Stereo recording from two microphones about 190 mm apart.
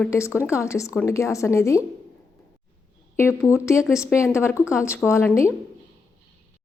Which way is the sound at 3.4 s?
15° left (ahead or behind).